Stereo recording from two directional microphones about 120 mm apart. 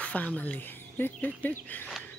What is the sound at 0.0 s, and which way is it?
Speech, 10° left (ahead or behind).